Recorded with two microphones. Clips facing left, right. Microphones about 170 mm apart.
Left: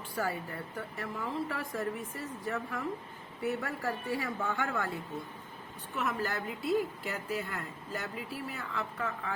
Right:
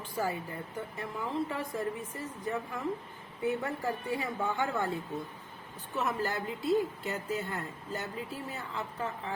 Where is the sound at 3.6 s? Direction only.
20° right (ahead or behind).